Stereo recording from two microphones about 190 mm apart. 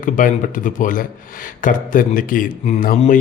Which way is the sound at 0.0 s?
45° left (ahead or behind).